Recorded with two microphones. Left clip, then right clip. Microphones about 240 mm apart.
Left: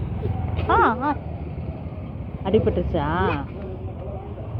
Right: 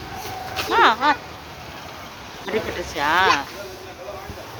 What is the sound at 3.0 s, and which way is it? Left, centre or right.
Speech, centre.